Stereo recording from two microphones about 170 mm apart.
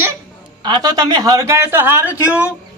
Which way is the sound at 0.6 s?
25° right (ahead or behind).